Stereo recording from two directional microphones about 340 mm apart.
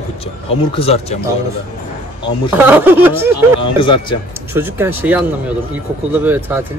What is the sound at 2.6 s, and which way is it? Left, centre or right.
Speech, centre.